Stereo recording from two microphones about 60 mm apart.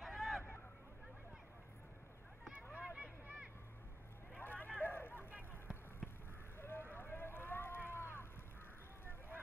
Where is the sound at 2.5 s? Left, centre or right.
Centre.